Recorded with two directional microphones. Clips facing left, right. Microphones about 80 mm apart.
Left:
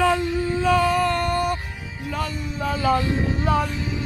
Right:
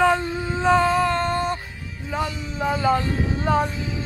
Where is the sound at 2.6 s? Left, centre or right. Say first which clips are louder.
Right 1 dB; right.